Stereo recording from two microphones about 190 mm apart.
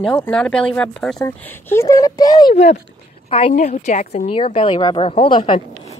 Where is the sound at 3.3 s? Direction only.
35° left (ahead or behind).